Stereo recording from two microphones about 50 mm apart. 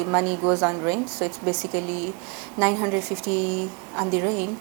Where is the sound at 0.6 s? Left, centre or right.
Right.